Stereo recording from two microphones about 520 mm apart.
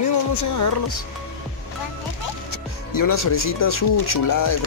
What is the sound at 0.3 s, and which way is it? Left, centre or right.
Speech, left.